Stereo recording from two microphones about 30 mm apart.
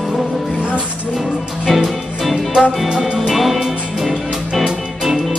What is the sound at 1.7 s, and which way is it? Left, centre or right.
Music, centre.